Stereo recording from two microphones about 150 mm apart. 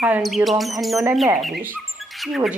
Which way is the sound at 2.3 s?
Centre (ahead or behind).